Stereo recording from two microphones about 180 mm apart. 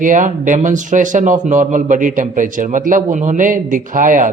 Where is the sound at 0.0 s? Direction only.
45° right (ahead or behind).